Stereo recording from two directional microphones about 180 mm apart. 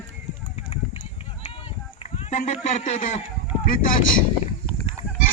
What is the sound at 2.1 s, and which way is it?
A man's voice, 35° left (ahead or behind).